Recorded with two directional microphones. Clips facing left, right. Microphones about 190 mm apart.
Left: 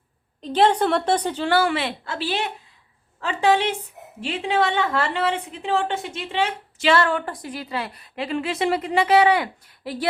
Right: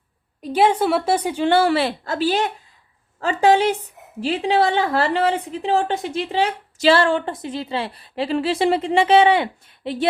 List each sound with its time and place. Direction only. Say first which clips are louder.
0.4 s a woman's voice: right 1 dB; 10° right (ahead or behind)
1.5 s a woman's voice: right 5 dB; 30° right (ahead or behind)